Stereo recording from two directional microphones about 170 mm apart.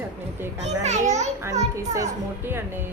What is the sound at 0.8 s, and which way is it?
Speech, 40° right (ahead or behind).